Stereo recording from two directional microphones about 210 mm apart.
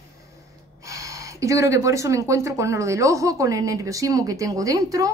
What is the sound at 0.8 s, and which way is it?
Speech, 15° right (ahead or behind).